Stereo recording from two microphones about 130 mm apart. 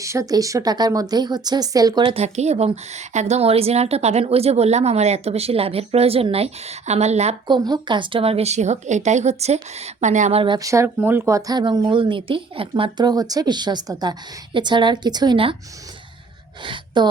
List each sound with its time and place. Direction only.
0.0 s speech: 25° right (ahead or behind)
2.1 s a woman's voice: 60° right (ahead or behind)
7.4 s a woman's voice: 35° right (ahead or behind); by 10.4 s 65° right (ahead or behind)
10.6 s speech: 25° right (ahead or behind); by 15.5 s 40° right (ahead or behind)
16.6 s a woman's voice: 35° right (ahead or behind)